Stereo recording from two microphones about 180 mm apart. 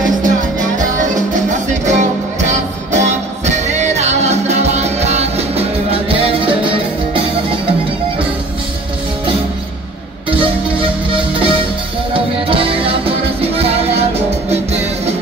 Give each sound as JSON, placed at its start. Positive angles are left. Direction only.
{"t": 0.2, "sound": "music", "side_deg": -45}
{"t": 11.1, "sound": "music", "side_deg": -30}